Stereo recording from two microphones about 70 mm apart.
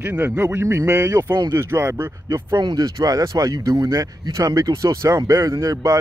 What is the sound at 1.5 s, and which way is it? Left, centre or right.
Speech, right.